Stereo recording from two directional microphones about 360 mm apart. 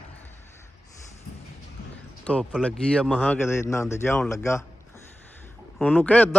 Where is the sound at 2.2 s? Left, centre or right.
Centre.